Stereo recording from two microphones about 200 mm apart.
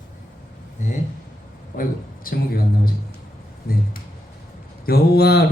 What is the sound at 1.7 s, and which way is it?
Speech, 45° left (ahead or behind).